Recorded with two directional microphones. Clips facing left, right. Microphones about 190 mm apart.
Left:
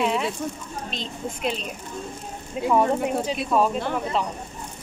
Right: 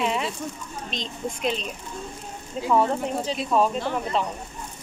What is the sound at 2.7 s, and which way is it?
Speech, 10° left (ahead or behind).